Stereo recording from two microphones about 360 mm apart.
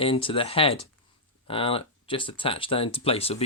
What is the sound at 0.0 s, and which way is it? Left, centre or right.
Speech, centre.